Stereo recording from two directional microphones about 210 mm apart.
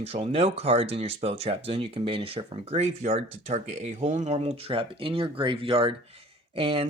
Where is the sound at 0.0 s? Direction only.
30° right (ahead or behind).